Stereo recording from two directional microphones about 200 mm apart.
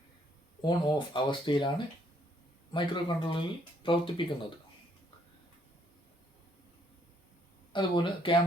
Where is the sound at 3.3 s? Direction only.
25° left (ahead or behind).